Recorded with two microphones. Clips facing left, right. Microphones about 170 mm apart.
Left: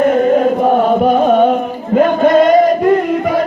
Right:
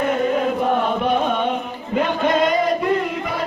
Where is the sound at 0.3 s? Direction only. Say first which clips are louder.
Left 8 dB; 45° left (ahead or behind).